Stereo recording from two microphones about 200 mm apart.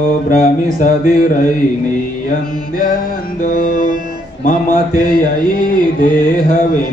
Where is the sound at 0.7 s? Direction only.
45° left (ahead or behind).